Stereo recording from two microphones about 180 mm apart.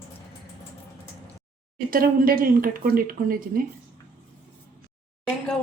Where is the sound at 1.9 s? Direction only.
55° right (ahead or behind).